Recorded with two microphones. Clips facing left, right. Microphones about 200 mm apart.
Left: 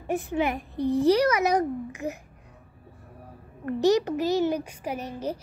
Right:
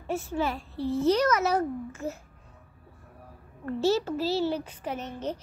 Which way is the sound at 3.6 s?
15° left (ahead or behind).